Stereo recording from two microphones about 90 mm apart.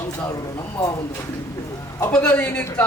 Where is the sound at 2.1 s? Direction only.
15° left (ahead or behind).